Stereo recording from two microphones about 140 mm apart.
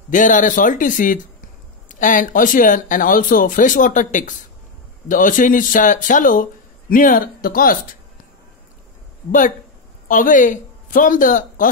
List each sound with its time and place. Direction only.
0.1 s speech: 65° left (ahead or behind)
6.9 s speech: 85° left
10.0 s speech: 75° left (ahead or behind)